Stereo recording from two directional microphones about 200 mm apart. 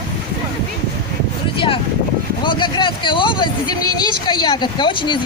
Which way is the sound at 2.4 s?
25° left (ahead or behind).